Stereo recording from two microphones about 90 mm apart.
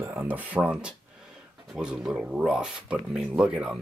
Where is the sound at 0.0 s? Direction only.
25° right (ahead or behind).